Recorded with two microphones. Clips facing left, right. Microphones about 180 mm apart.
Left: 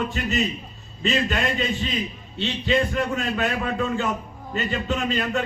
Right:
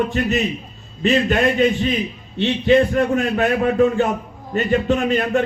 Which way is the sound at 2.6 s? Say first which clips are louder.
Right 8 dB; 55° right (ahead or behind).